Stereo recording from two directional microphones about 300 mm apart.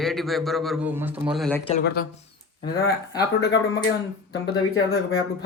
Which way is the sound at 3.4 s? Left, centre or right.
Left.